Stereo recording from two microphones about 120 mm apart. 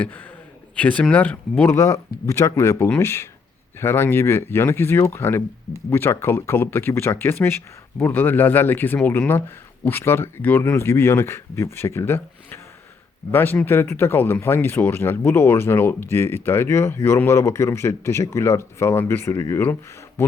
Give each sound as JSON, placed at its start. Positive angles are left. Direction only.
{"t": 0.0, "sound": "speech", "side_deg": 15}